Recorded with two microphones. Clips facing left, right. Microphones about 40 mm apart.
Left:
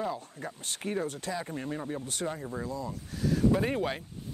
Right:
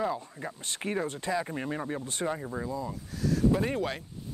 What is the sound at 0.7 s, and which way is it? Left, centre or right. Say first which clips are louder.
Speech: right 1 dB; right.